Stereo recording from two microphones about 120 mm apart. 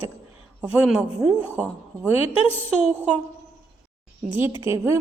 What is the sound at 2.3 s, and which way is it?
Speech, 50° left (ahead or behind).